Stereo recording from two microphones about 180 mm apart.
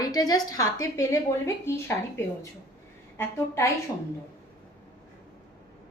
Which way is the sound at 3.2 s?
15° left (ahead or behind).